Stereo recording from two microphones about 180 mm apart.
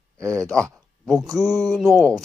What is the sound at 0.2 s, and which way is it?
Speech, 5° left (ahead or behind).